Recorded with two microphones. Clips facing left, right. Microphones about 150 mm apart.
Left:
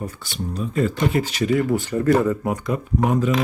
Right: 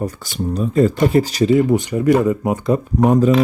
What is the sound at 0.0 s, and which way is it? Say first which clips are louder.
Speech: right 7 dB; 40° right (ahead or behind).